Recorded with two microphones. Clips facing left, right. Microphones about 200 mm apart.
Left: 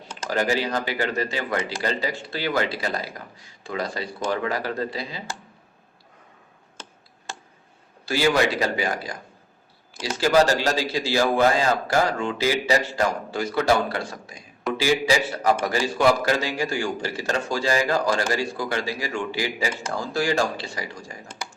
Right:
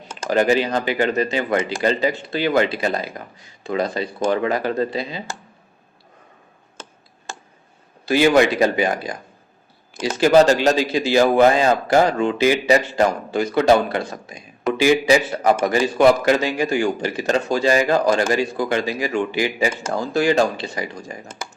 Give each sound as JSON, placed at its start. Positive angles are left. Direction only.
{"t": 0.3, "sound": "speech", "side_deg": -20}
{"t": 6.8, "sound": "tick", "side_deg": -45}
{"t": 7.3, "sound": "a sound", "side_deg": -45}
{"t": 8.0, "sound": "a man's voice", "side_deg": -20}